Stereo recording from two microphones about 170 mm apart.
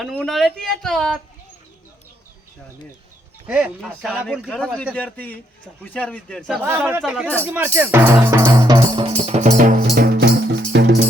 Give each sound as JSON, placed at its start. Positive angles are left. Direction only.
{"t": 0.0, "sound": "speech", "side_deg": 0}
{"t": 3.4, "sound": "speech", "side_deg": -5}
{"t": 3.8, "sound": "speech", "side_deg": 5}
{"t": 6.6, "sound": "speech", "side_deg": -10}
{"t": 9.8, "sound": "music", "side_deg": -65}
{"t": 10.7, "sound": "music", "side_deg": -80}